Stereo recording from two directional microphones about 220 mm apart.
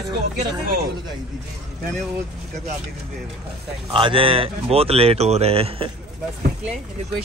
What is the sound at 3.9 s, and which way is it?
Speech, 25° right (ahead or behind).